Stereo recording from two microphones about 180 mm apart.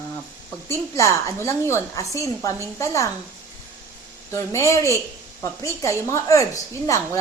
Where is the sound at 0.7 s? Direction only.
15° left (ahead or behind).